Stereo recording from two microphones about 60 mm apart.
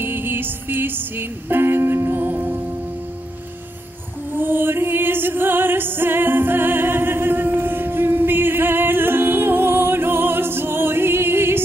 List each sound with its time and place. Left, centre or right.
0.0 s music: right
4.4 s music: right